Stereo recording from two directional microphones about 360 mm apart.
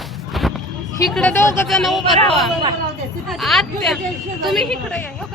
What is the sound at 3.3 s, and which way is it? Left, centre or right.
A woman's voice, centre.